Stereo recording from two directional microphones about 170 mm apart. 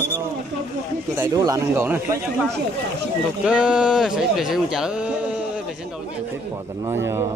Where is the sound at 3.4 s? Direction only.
5° right (ahead or behind).